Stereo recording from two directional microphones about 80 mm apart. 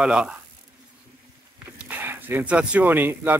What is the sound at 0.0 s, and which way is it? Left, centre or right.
Speech, centre.